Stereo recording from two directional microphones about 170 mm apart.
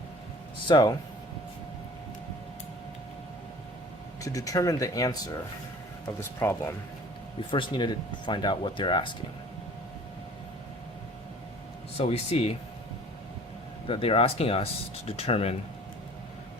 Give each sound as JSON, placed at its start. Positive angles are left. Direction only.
{"t": 0.7, "sound": "speech", "side_deg": 25}
{"t": 4.2, "sound": "speech", "side_deg": 20}
{"t": 6.4, "sound": "speech", "side_deg": 15}
{"t": 7.5, "sound": "speech", "side_deg": 25}
{"t": 11.9, "sound": "speech", "side_deg": 35}
{"t": 13.8, "sound": "speech", "side_deg": 30}